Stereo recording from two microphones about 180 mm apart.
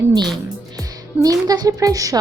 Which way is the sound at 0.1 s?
25° right (ahead or behind).